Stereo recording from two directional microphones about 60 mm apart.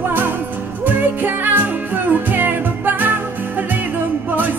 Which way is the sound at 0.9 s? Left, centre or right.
Right.